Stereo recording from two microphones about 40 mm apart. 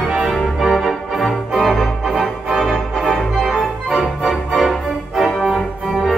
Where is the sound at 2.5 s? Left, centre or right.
Centre.